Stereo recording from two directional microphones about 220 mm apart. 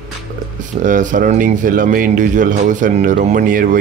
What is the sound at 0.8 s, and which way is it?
Speech, 35° right (ahead or behind).